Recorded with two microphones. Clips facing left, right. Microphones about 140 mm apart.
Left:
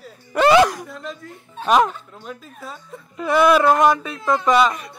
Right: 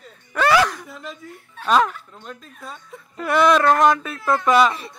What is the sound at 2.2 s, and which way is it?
Speech, 5° left (ahead or behind).